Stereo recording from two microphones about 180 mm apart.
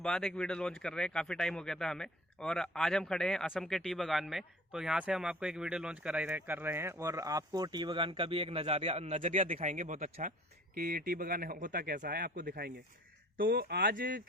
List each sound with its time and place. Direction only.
0.0 s speech: 5° left (ahead or behind); by 14.2 s 55° right (ahead or behind)